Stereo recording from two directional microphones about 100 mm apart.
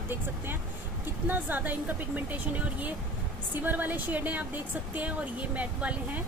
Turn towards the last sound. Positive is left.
turn(degrees=-15)  # may be behind; listen again after turning